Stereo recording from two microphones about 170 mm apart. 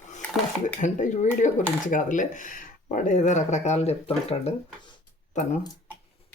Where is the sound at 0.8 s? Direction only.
45° left (ahead or behind).